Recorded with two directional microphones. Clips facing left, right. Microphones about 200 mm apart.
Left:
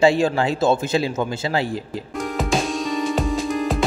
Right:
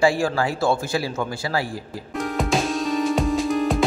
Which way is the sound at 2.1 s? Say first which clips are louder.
Even; centre (ahead or behind).